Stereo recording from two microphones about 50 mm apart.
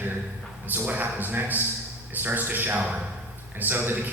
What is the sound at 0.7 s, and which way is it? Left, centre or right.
A man's voice, right.